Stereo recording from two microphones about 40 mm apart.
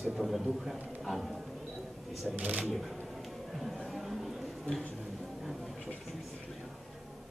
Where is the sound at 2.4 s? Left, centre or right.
Right.